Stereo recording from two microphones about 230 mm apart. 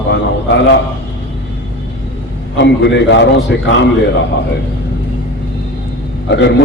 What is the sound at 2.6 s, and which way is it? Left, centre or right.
Speech, left.